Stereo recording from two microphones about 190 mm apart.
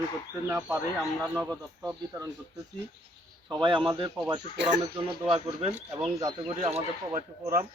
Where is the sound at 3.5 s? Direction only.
25° right (ahead or behind).